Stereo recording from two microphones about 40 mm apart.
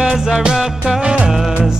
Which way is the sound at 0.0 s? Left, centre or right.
Centre.